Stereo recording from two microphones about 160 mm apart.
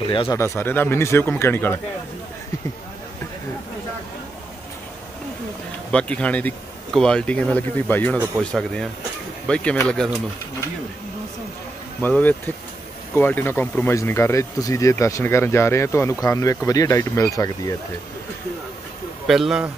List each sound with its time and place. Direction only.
0.1 s speech: 30° left (ahead or behind)
0.4 s speech: 15° left (ahead or behind)
5.9 s speech: 5° left (ahead or behind)
12.0 s speech: 10° left (ahead or behind)
19.2 s speech: 5° right (ahead or behind)